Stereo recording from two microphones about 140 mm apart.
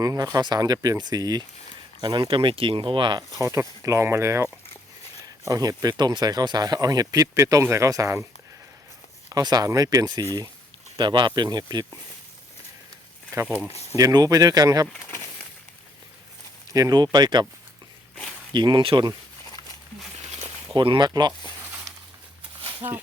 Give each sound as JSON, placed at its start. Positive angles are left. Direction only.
{"t": 0.0, "sound": "speech", "side_deg": -25}
{"t": 3.4, "sound": "speech", "side_deg": -20}
{"t": 9.3, "sound": "speech", "side_deg": -30}
{"t": 13.3, "sound": "speech", "side_deg": -25}
{"t": 14.9, "sound": "a sound", "side_deg": 15}
{"t": 16.7, "sound": "speech", "side_deg": -25}
{"t": 18.5, "sound": "speech", "side_deg": -35}
{"t": 20.7, "sound": "speech", "side_deg": -35}